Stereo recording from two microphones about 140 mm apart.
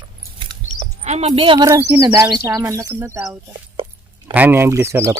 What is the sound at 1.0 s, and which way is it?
Speech, 50° right (ahead or behind).